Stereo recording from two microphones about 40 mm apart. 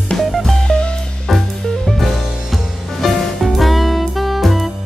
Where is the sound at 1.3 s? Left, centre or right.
Centre.